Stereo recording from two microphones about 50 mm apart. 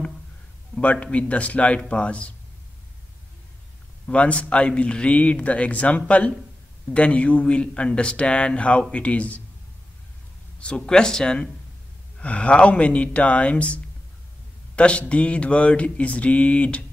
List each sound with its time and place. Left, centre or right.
0.7 s speech: left
4.1 s speech: left
10.6 s speech: centre
12.2 s speech: left
14.8 s speech: left